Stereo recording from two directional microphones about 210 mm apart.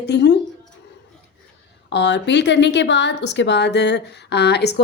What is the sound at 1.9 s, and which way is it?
A woman's voice, 55° left (ahead or behind).